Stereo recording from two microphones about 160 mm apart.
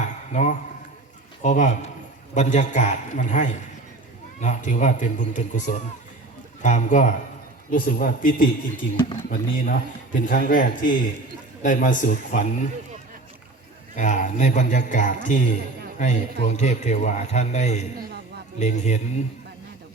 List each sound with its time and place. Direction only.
0.0 s a sound: 45° left (ahead or behind)
1.4 s a man's voice: 50° left (ahead or behind)
13.9 s a man's voice: 50° left (ahead or behind)